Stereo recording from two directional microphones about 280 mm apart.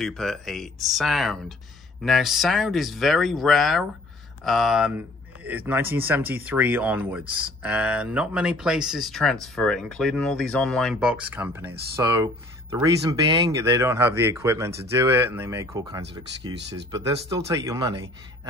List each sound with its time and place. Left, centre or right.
0.0 s speech: centre
16.5 s speech: right
17.6 s speech: centre